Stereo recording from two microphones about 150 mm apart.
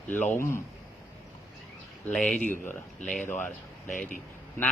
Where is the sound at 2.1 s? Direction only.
5° left (ahead or behind).